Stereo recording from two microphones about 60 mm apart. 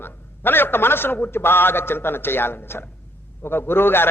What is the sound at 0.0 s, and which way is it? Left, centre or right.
A man's voice, left.